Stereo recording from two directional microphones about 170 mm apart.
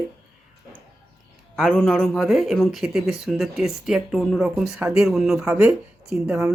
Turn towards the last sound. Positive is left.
turn(degrees=-5)  # may be behind; listen again after turning